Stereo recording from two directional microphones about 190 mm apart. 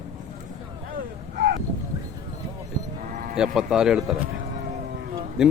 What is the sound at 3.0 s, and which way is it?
Sheep, 45° right (ahead or behind).